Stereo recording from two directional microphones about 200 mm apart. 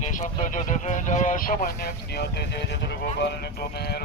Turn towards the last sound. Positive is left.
turn(degrees=55)  # may be behind; listen again after turning